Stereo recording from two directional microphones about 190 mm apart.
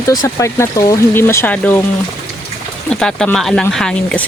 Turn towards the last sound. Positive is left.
turn(degrees=5)  # may be behind; listen again after turning